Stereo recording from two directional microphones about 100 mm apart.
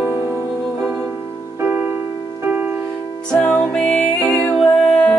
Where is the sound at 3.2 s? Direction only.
10° left (ahead or behind).